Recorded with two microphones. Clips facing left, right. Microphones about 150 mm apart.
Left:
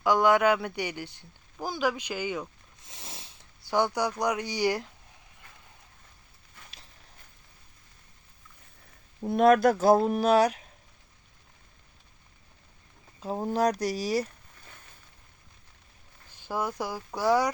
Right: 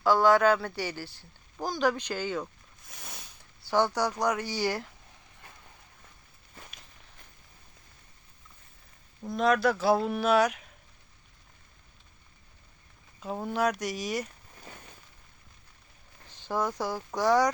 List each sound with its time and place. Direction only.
0.0 s speech: 15° left (ahead or behind)
1.6 s speech: 10° left (ahead or behind)
2.8 s a sound: 25° left (ahead or behind)
3.7 s speech: 15° left (ahead or behind)
9.3 s speech: 55° left (ahead or behind); by 10.7 s 35° left (ahead or behind)
13.1 s speech: 35° left (ahead or behind)
16.3 s speech: 10° left (ahead or behind)